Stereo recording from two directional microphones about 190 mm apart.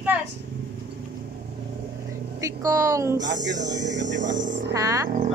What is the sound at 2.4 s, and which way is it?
Speech, 15° right (ahead or behind).